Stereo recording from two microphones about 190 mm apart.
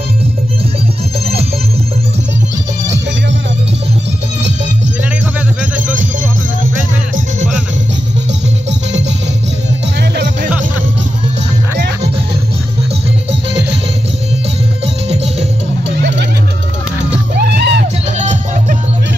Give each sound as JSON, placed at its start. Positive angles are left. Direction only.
{"t": 13.3, "sound": "music", "side_deg": -65}
{"t": 17.1, "sound": "music", "side_deg": -60}